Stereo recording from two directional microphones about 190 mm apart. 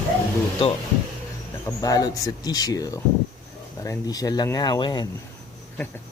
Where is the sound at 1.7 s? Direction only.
20° left (ahead or behind).